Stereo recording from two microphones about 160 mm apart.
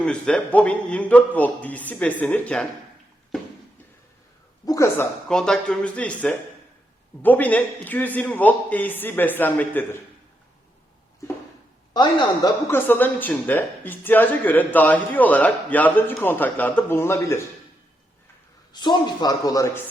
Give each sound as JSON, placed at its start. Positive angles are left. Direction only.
{"t": 0.0, "sound": "speech", "side_deg": 5}
{"t": 4.6, "sound": "speech", "side_deg": 20}
{"t": 5.3, "sound": "speech", "side_deg": 5}
{"t": 11.9, "sound": "a man's voice", "side_deg": 30}
{"t": 12.6, "sound": "speech", "side_deg": 15}
{"t": 18.7, "sound": "a man's voice", "side_deg": 30}